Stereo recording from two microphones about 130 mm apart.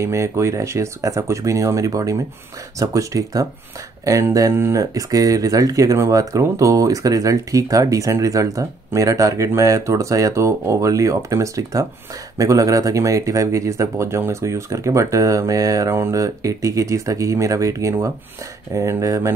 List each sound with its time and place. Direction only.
0.0 s speech: 20° right (ahead or behind)